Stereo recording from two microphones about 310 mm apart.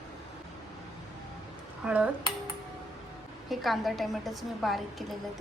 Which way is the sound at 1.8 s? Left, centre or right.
Centre.